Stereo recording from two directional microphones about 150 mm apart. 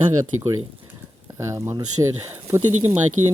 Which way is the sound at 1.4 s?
20° right (ahead or behind).